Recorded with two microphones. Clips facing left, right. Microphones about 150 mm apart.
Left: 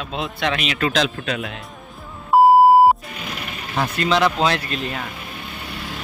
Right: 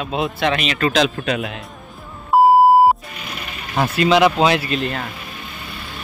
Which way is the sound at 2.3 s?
Centre (ahead or behind).